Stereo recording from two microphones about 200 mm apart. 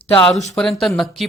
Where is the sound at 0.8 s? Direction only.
Centre (ahead or behind).